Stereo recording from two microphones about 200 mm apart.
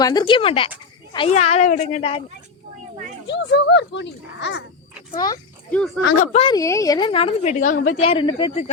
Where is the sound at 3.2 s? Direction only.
60° left (ahead or behind).